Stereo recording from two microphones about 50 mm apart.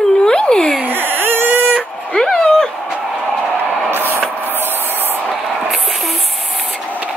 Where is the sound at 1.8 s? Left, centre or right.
Left.